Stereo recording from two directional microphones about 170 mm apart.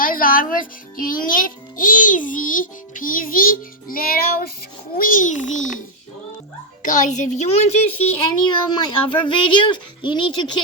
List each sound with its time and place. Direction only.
0.0 s a child's voice: 55° left (ahead or behind)
6.8 s a woman's voice: 50° left (ahead or behind)
8.4 s speech: 25° left (ahead or behind)